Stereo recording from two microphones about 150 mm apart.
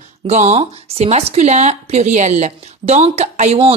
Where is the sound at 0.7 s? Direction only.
45° right (ahead or behind).